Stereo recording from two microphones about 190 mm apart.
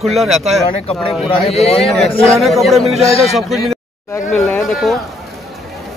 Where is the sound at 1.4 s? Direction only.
30° left (ahead or behind).